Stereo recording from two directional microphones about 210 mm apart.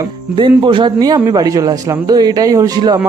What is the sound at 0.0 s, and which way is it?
A man's voice, 25° right (ahead or behind).